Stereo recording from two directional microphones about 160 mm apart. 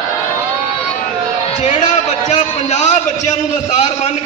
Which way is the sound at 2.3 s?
45° left (ahead or behind).